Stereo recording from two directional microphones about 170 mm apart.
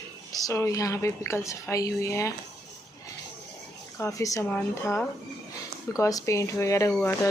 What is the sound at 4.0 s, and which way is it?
A woman's voice, 20° left (ahead or behind).